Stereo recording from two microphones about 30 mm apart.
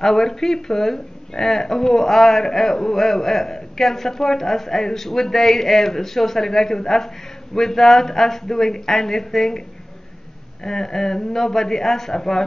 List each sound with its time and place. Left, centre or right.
0.0 s speech: centre
10.6 s speech: centre